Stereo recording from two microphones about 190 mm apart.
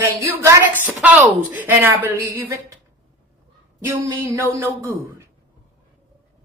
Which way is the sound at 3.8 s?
15° right (ahead or behind).